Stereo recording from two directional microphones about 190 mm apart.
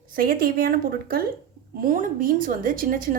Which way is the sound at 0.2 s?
50° right (ahead or behind).